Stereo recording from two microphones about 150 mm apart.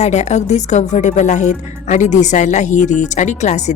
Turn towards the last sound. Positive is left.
turn(degrees=50)  # may be behind; listen again after turning